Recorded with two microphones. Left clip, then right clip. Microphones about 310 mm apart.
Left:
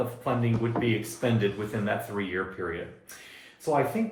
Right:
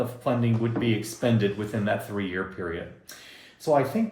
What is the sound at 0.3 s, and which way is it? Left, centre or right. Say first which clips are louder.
Speech: right 3 dB; right.